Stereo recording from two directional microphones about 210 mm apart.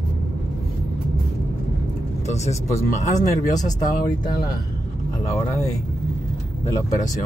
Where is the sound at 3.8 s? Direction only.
40° left (ahead or behind).